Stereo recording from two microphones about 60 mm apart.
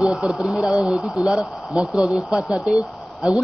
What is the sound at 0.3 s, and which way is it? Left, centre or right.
A man's voice, centre.